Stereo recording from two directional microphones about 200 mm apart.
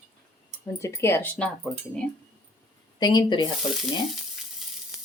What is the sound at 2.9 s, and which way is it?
Speech, 20° left (ahead or behind).